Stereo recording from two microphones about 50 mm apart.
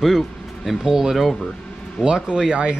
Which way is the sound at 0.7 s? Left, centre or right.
Centre.